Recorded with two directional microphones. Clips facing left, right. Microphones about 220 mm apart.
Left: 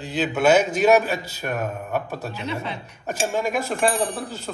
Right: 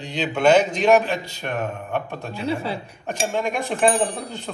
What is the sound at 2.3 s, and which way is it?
Speech, 30° right (ahead or behind).